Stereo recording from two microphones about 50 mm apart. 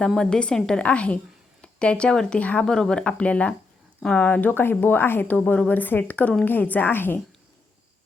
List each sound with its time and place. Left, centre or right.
0.2 s a woman's voice: centre
4.2 s speech: left
5.3 s speech: left